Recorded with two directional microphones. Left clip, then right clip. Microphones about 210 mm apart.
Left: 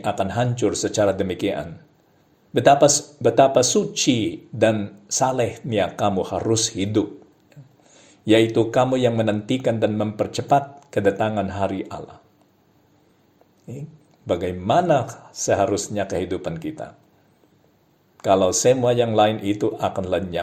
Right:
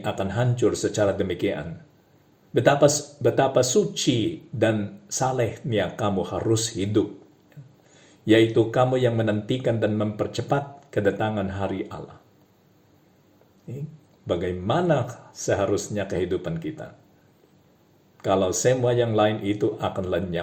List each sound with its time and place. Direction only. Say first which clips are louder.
0.0 s speech: left 4 dB; 25° left (ahead or behind)
13.7 s speech: left 1 dB; 25° left (ahead or behind)
18.2 s speech: left 5 dB; 30° left (ahead or behind)